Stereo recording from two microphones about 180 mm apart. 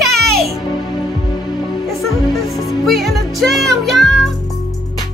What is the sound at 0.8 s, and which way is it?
Music, 20° left (ahead or behind).